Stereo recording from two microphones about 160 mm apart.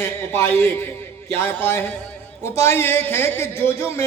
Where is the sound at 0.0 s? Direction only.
15° left (ahead or behind).